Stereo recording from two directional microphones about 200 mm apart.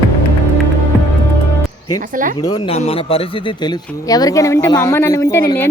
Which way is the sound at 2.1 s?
40° right (ahead or behind).